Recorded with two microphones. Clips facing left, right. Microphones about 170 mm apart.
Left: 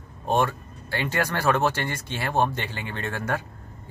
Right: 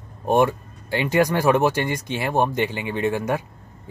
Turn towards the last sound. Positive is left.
turn(degrees=-15)  # may be behind; listen again after turning